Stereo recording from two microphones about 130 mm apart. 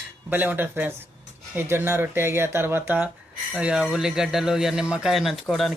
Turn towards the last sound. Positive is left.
turn(degrees=0)  # may be behind; listen again after turning